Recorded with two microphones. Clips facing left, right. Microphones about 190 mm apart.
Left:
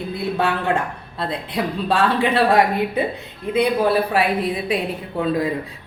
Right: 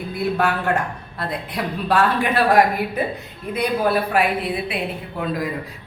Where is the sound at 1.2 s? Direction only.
25° left (ahead or behind).